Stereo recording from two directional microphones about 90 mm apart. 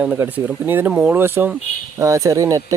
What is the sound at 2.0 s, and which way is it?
Speech, 35° right (ahead or behind).